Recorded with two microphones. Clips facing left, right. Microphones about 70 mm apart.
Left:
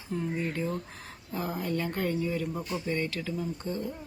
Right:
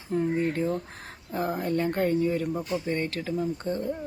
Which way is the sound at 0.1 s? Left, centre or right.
Right.